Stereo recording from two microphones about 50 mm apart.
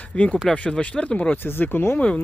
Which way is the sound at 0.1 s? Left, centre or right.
Left.